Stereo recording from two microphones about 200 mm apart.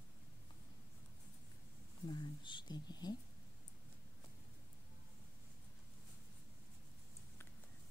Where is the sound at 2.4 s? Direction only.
20° left (ahead or behind).